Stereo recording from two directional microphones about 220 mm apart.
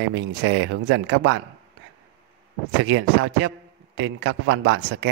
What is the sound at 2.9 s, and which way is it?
Speech, 55° right (ahead or behind).